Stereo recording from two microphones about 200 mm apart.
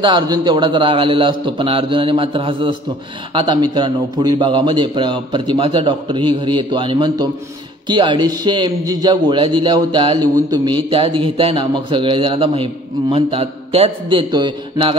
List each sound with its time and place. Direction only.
0.0 s speech: 25° right (ahead or behind)